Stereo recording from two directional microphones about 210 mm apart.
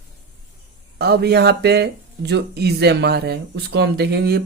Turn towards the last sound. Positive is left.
turn(degrees=-50)  # may be behind; listen again after turning